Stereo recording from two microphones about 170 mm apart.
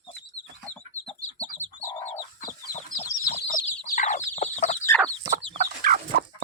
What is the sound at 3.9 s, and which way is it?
Chicken, 50° left (ahead or behind).